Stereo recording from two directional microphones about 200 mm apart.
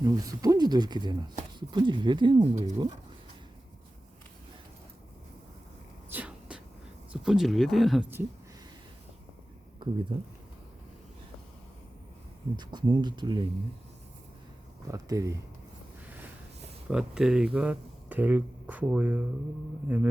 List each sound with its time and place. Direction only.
0.0 s speech: 15° right (ahead or behind)
6.1 s a sound: 5° right (ahead or behind)
7.1 s speech: centre (ahead or behind)
10.1 s speech: 25° right (ahead or behind)
12.5 s speech: 20° right (ahead or behind)
14.8 s speech: 15° right (ahead or behind)
16.9 s speech: 5° right (ahead or behind)